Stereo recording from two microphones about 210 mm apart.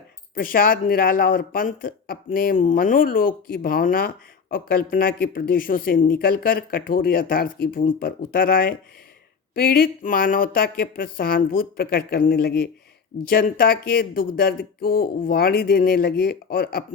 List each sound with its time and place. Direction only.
0.3 s speech: 40° left (ahead or behind)